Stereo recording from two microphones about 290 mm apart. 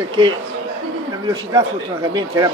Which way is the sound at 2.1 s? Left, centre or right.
Centre.